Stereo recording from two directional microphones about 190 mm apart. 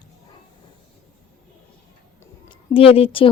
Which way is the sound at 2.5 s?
30° left (ahead or behind).